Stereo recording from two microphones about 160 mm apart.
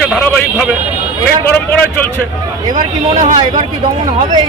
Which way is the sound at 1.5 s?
10° left (ahead or behind).